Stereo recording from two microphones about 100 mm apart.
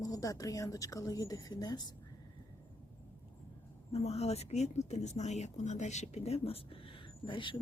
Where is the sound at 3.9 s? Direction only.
90° left; by 7.6 s 55° left (ahead or behind).